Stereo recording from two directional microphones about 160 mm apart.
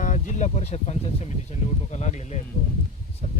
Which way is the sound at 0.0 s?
50° left (ahead or behind).